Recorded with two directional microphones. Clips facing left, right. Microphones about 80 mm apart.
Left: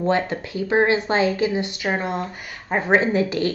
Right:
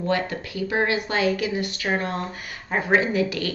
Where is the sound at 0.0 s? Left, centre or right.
Left.